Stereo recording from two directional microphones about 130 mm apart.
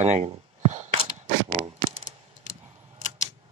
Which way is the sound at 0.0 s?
60° right (ahead or behind).